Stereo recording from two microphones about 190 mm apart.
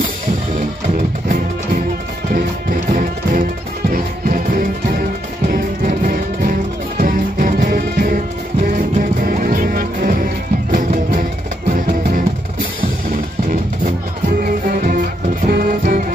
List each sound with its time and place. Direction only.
0.6 s music: 45° right (ahead or behind)
5.5 s music: 50° right (ahead or behind)
9.2 s music: 45° right (ahead or behind)
14.4 s music: 45° right (ahead or behind)